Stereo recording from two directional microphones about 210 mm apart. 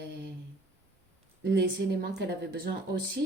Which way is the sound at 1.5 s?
55° right (ahead or behind).